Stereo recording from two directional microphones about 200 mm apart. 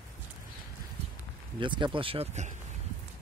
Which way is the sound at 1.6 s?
25° right (ahead or behind).